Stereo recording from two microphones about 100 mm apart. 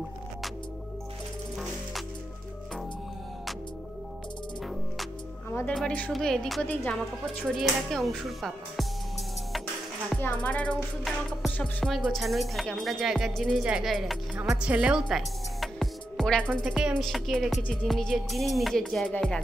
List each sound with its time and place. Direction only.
5.5 s music: 15° left (ahead or behind)
6.1 s music: 5° left (ahead or behind)
7.4 s music: centre (ahead or behind)
10.4 s music: 15° left (ahead or behind)
11.1 s music: centre (ahead or behind)
13.6 s speech: 5° right (ahead or behind)
14.6 s music: 10° right (ahead or behind)
16.6 s speech: 10° right (ahead or behind)
17.0 s music: centre (ahead or behind)